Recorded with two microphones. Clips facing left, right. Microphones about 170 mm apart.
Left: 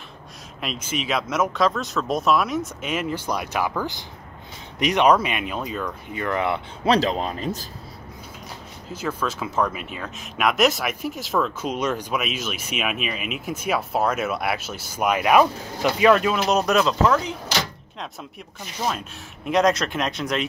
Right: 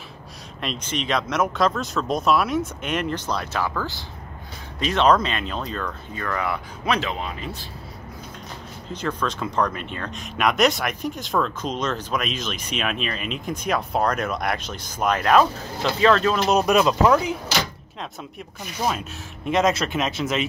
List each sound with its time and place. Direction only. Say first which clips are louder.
0.6 s speech: even; 5° left (ahead or behind); by 7.0 s 25° left (ahead or behind)
7.0 s speech: left 5 dB; 35° left (ahead or behind)
8.9 s speech: even; 5° left (ahead or behind)
16.5 s speech: right 2 dB; 10° right (ahead or behind)
18.9 s speech: right 1 dB; 5° right (ahead or behind)